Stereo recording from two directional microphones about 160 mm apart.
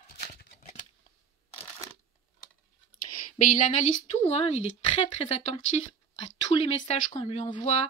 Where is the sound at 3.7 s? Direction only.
45° left (ahead or behind).